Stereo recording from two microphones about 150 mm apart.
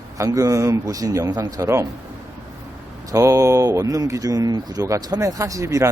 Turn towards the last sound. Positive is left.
turn(degrees=-20)  # may be behind; listen again after turning